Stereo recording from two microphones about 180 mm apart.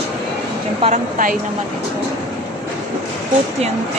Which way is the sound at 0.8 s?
45° right (ahead or behind).